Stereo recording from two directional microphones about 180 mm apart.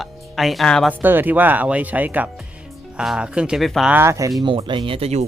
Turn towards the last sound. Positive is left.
turn(degrees=-35)  # may be behind; listen again after turning